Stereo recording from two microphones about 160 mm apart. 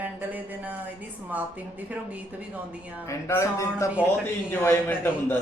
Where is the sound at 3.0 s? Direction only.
15° left (ahead or behind).